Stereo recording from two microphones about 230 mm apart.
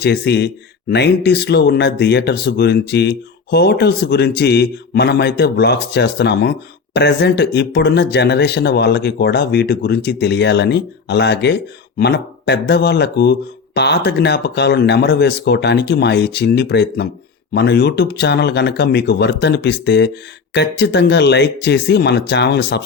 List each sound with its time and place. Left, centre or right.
0.0 s speech: left